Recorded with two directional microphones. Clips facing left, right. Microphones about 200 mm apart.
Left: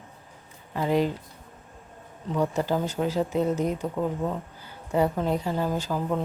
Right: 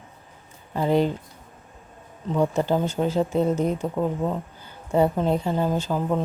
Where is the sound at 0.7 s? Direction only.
30° right (ahead or behind).